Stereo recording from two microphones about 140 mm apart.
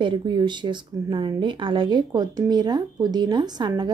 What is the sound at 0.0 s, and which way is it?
Speech, 35° right (ahead or behind).